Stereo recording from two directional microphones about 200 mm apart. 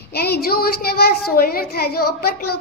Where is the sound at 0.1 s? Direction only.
50° left (ahead or behind).